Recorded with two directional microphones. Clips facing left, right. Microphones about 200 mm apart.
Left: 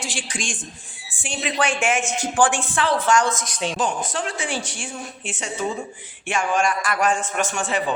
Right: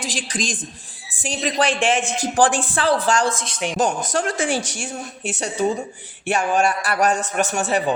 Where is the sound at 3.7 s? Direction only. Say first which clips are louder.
Right 6 dB; 40° right (ahead or behind).